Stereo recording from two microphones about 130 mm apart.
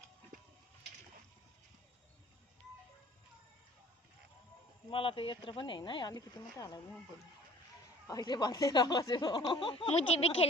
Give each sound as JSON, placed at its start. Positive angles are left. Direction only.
{"t": 4.9, "sound": "speech", "side_deg": 45}
{"t": 8.0, "sound": "speech", "side_deg": 30}